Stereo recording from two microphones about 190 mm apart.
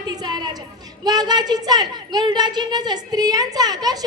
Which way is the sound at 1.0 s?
20° right (ahead or behind).